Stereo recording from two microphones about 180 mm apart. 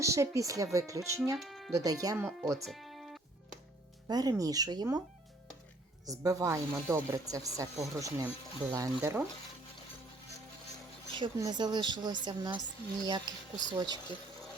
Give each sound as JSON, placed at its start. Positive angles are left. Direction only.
{"t": 0.0, "sound": "speech", "side_deg": -15}
{"t": 1.4, "sound": "music", "side_deg": 0}
{"t": 1.7, "sound": "a woman's voice", "side_deg": -20}
{"t": 2.6, "sound": "music", "side_deg": 0}
{"t": 4.1, "sound": "a woman's voice", "side_deg": -20}
{"t": 6.1, "sound": "a woman's voice", "side_deg": -20}
{"t": 11.1, "sound": "a woman's voice", "side_deg": -25}